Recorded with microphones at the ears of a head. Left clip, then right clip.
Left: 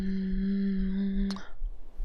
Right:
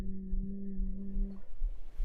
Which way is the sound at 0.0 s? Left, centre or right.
Left.